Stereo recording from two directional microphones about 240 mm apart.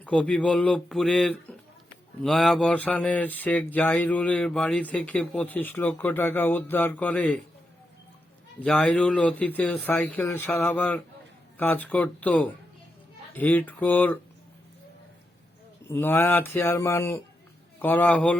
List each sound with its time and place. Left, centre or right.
0.0 s speech: centre
8.6 s speech: centre
15.9 s speech: centre